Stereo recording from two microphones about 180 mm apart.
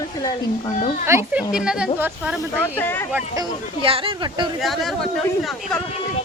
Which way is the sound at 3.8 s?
30° right (ahead or behind).